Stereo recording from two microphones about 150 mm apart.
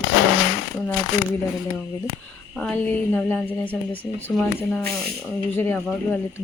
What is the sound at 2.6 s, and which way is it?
Speech, 10° left (ahead or behind).